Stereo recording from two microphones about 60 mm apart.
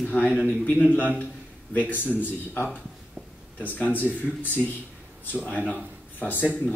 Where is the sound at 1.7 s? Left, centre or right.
Left.